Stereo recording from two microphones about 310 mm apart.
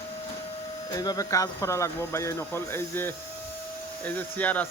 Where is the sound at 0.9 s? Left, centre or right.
Centre.